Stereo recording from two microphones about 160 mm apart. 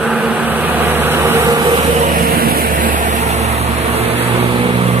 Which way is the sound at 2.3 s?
70° right (ahead or behind).